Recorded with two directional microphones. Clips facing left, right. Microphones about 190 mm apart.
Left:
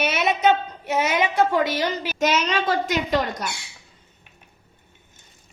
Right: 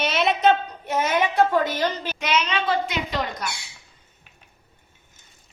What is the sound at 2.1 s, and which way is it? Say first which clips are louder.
A woman's voice: left 3 dB; 45° left (ahead or behind).